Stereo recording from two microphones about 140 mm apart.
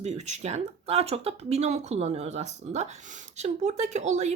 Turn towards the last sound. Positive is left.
turn(degrees=-55)  # may be behind; listen again after turning